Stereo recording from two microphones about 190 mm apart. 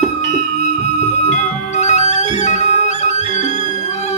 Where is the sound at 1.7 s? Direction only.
40° left (ahead or behind).